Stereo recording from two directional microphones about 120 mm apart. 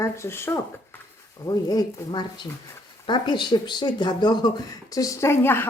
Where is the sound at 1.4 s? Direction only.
35° left (ahead or behind).